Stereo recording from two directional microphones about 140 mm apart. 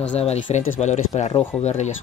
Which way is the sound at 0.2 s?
50° left (ahead or behind).